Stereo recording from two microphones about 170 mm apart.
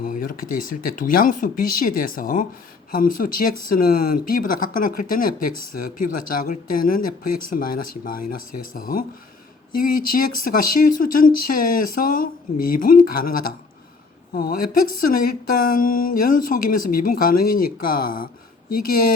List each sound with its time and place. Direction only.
0.0 s speech: 55° left (ahead or behind)